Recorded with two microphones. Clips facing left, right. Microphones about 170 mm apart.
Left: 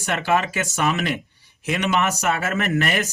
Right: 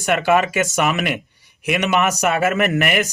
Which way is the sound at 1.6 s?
15° right (ahead or behind).